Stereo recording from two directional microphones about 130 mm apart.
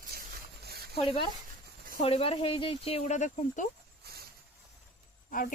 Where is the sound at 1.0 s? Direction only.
45° left (ahead or behind); by 3.7 s 70° left (ahead or behind).